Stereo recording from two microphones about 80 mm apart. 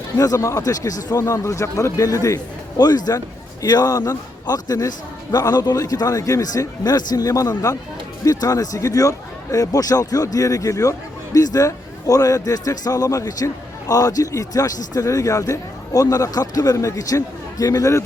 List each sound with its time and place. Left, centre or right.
0.2 s speech: left
2.0 s speech: left